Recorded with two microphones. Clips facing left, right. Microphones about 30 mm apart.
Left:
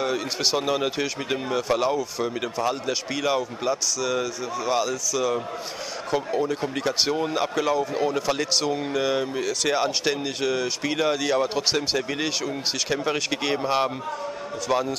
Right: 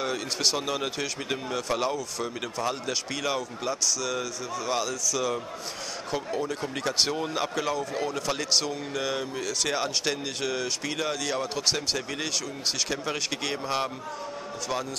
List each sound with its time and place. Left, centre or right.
0.0 s speech: centre